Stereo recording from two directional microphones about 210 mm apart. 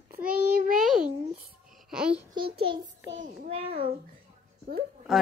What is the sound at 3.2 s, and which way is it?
Speech, 40° right (ahead or behind).